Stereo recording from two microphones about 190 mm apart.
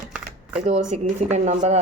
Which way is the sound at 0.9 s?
35° right (ahead or behind).